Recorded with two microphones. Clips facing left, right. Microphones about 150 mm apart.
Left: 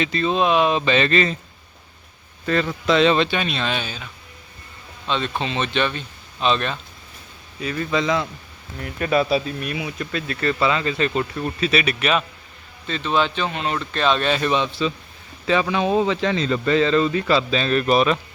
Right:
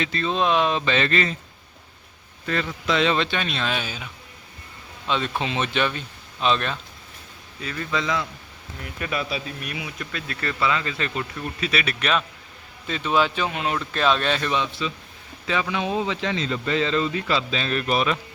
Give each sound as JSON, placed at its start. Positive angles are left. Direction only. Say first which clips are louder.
{"t": 0.0, "sound": "speech", "louder": "left 3 dB", "side_deg": 15}
{"t": 2.8, "sound": "speech", "louder": "left 5 dB", "side_deg": 30}
{"t": 3.2, "sound": "a man's voice", "louder": "left 3 dB", "side_deg": 5}
{"t": 7.6, "sound": "speech", "louder": "left 5 dB", "side_deg": 20}
{"t": 9.0, "sound": "speech", "louder": "left 9 dB", "side_deg": 35}
{"t": 11.9, "sound": "speech", "louder": "left 3 dB", "side_deg": 5}
{"t": 12.9, "sound": "speech", "louder": "left 1 dB", "side_deg": -10}
{"t": 14.4, "sound": "speech", "louder": "left 4 dB", "side_deg": 25}